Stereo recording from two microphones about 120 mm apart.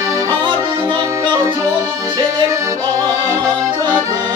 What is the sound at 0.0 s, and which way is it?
Accordion, 25° right (ahead or behind).